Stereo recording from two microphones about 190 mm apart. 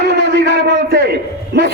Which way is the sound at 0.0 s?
65° right (ahead or behind).